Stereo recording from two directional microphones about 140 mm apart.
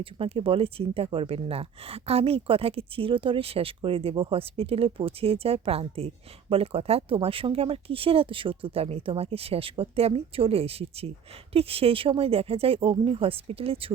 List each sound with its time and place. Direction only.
0.0 s speech: 40° right (ahead or behind)